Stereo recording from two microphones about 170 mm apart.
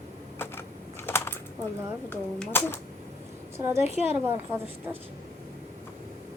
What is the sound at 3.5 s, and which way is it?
Speech, 15° right (ahead or behind).